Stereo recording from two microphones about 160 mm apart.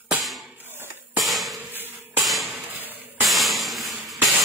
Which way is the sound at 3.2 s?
Centre (ahead or behind).